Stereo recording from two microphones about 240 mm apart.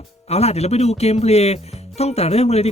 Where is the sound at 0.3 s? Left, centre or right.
Left.